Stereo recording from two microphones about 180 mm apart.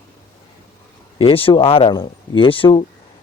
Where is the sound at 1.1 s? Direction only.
30° left (ahead or behind).